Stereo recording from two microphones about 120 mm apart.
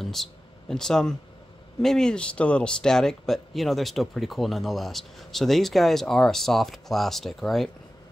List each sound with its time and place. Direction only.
0.0 s speech: centre (ahead or behind)